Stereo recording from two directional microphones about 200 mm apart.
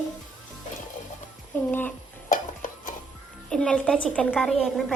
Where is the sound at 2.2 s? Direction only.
40° left (ahead or behind).